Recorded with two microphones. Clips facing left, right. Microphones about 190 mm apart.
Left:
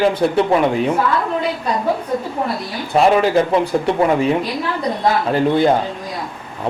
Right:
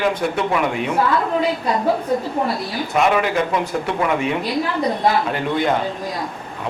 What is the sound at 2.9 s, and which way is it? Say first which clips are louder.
Speech: left 5 dB; 35° left (ahead or behind).